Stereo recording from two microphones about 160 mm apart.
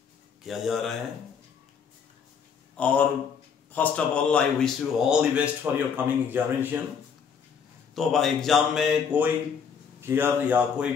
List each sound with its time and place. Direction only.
0.4 s speech: centre (ahead or behind)
2.8 s speech: 10° left (ahead or behind); by 6.8 s 10° right (ahead or behind)
7.9 s speech: centre (ahead or behind)